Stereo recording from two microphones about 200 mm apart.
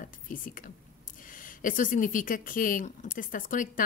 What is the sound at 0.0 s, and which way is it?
Speech, 45° left (ahead or behind).